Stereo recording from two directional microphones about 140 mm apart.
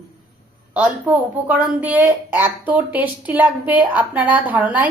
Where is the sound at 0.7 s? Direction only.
10° right (ahead or behind).